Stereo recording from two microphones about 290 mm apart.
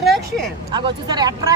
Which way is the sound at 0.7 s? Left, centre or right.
Centre.